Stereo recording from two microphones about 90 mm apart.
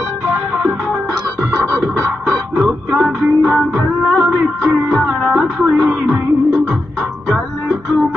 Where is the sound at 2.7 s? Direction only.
10° right (ahead or behind).